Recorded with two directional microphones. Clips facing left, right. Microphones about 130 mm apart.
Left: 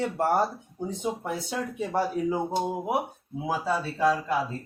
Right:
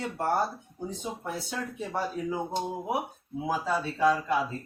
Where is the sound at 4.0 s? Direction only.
5° left (ahead or behind).